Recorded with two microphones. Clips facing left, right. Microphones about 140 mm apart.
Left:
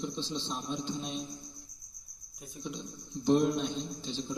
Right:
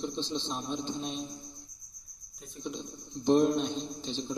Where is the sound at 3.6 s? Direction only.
20° right (ahead or behind).